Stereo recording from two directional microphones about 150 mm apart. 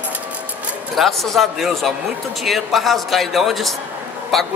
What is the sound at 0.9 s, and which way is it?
Speech, centre (ahead or behind).